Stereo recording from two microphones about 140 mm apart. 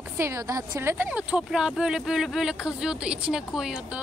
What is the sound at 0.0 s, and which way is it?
Speech, 20° right (ahead or behind).